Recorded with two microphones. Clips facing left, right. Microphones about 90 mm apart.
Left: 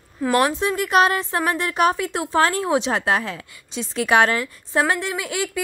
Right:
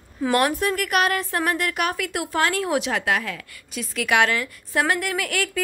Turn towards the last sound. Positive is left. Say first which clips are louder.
# even
turn(degrees=20)  # may be behind; listen again after turning